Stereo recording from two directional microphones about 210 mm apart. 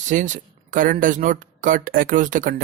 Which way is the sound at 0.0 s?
35° right (ahead or behind).